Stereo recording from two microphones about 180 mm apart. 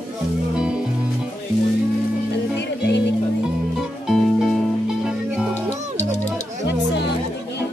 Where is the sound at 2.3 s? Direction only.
75° left (ahead or behind).